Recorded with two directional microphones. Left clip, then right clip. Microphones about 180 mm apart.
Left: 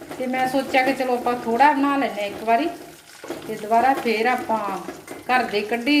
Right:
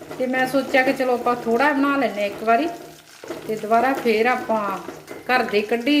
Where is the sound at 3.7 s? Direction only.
20° right (ahead or behind).